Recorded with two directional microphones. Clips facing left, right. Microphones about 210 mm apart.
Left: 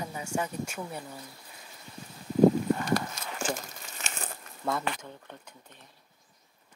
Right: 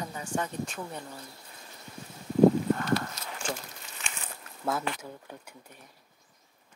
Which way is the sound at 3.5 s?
45° left (ahead or behind).